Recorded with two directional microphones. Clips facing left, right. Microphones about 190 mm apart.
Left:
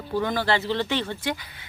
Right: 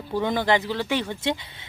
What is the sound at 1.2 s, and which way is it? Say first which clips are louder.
Speech: right 3 dB; 25° right (ahead or behind).